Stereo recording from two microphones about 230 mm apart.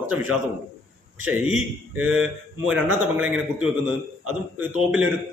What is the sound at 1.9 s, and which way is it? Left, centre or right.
A man's voice, centre.